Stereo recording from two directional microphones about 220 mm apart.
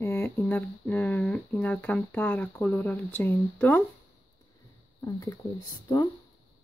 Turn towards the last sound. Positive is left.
turn(degrees=20)  # may be behind; listen again after turning